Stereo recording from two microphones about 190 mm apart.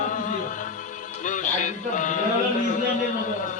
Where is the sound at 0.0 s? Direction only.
40° left (ahead or behind).